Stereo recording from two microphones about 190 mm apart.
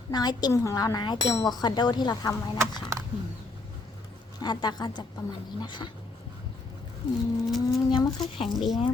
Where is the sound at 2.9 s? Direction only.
15° right (ahead or behind).